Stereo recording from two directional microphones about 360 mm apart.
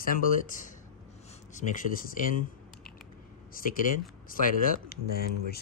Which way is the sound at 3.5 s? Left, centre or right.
Left.